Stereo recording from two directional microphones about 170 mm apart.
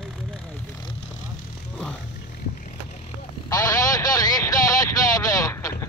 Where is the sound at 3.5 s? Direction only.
20° left (ahead or behind).